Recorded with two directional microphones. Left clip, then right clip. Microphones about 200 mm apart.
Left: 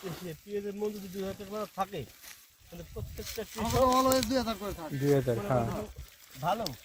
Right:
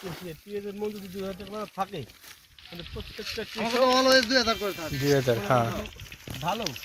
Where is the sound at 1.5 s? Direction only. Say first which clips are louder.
Right 2 dB; 10° left (ahead or behind).